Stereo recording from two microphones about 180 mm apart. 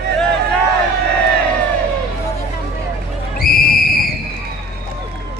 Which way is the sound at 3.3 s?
55° left (ahead or behind).